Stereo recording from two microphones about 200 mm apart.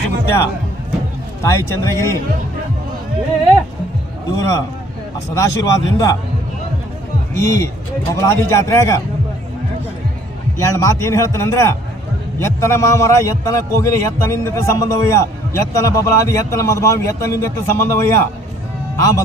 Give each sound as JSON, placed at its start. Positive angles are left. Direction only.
{"t": 1.4, "sound": "a man's voice", "side_deg": 15}
{"t": 4.4, "sound": "a man's voice", "side_deg": 15}
{"t": 7.3, "sound": "a man's voice", "side_deg": 15}
{"t": 10.6, "sound": "a man's voice", "side_deg": 15}